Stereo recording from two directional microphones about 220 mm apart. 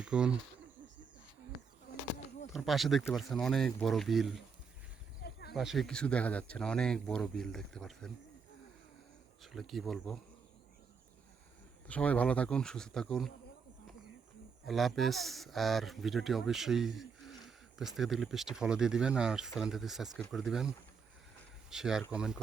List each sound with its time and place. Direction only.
0.0 s speech: 5° right (ahead or behind)
2.5 s speech: centre (ahead or behind)
5.2 s a sound: 45° left (ahead or behind)
5.5 s speech: centre (ahead or behind)
9.4 s speech: centre (ahead or behind)
11.9 s speech: 5° left (ahead or behind)
14.7 s speech: centre (ahead or behind)